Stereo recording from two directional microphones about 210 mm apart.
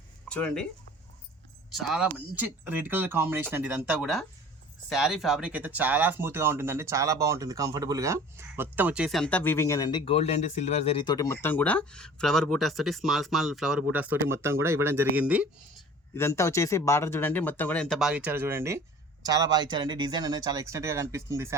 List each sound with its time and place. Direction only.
0.3 s speech: 5° left (ahead or behind)
1.7 s speech: centre (ahead or behind)
16.1 s speech: 15° left (ahead or behind); by 21.5 s 15° right (ahead or behind)